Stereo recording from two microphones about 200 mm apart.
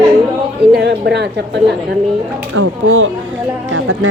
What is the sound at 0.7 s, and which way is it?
Speech, 55° right (ahead or behind).